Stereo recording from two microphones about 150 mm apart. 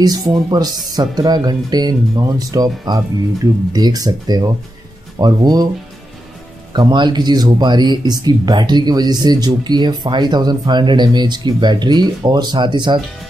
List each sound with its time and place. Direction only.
0.0 s speech: 25° right (ahead or behind)
6.7 s speech: 30° right (ahead or behind)